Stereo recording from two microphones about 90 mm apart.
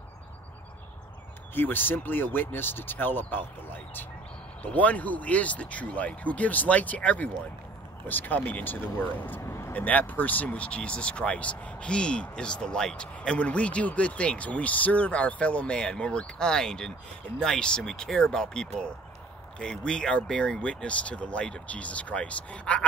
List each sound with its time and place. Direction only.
1.5 s speech: 20° left (ahead or behind)
4.6 s speech: 15° left (ahead or behind)
9.4 s vehicle: 30° left (ahead or behind)
9.8 s speech: 20° left (ahead or behind)